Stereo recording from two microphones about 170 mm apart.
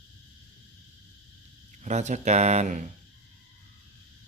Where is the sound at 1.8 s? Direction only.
45° right (ahead or behind).